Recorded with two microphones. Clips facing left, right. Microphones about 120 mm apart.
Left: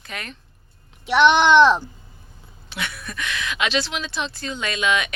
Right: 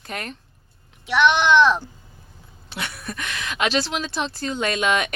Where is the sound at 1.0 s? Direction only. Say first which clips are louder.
Left 3 dB; 30° left (ahead or behind).